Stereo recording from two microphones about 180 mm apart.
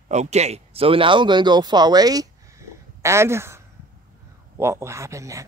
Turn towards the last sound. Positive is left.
turn(degrees=-15)  # may be behind; listen again after turning